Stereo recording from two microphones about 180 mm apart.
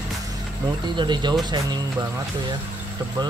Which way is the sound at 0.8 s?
25° right (ahead or behind).